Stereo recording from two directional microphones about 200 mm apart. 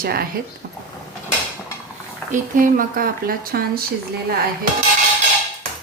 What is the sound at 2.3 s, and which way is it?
Speech, 40° right (ahead or behind).